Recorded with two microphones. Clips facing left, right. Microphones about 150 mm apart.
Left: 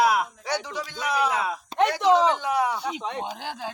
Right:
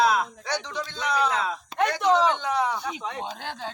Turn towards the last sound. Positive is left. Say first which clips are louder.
# left 1 dB
turn(degrees=10)  # may be behind; listen again after turning